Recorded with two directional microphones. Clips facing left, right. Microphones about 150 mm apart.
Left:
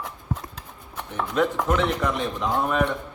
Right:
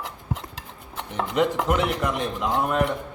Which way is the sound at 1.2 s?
20° right (ahead or behind).